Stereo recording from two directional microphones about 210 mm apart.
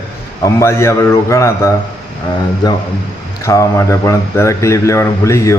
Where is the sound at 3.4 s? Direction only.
15° left (ahead or behind).